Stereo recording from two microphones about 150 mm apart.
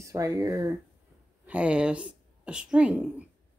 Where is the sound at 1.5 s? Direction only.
10° right (ahead or behind).